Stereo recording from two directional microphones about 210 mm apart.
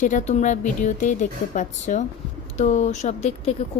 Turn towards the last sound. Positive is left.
turn(degrees=30)  # may be behind; listen again after turning